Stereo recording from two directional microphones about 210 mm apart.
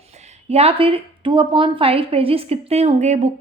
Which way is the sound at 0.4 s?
30° right (ahead or behind).